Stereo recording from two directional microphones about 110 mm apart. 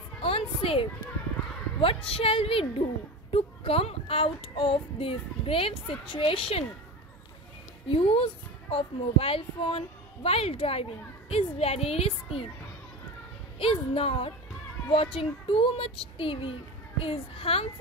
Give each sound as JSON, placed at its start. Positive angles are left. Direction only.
{"t": 0.2, "sound": "music", "side_deg": 60}
{"t": 1.8, "sound": "a child's voice", "side_deg": 60}
{"t": 7.9, "sound": "a child's voice", "side_deg": 55}
{"t": 13.6, "sound": "a child's voice", "side_deg": 60}